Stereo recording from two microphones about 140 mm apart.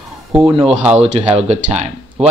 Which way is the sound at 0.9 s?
50° right (ahead or behind).